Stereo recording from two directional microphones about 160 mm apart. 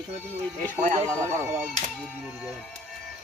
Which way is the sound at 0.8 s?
45° right (ahead or behind).